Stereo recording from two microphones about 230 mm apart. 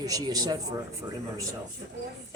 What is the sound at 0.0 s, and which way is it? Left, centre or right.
Speech, centre.